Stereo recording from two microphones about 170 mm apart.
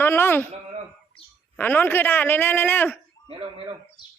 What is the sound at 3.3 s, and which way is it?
Speech, 30° right (ahead or behind).